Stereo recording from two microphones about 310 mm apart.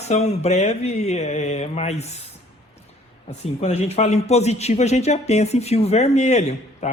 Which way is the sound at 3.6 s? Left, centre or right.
Centre.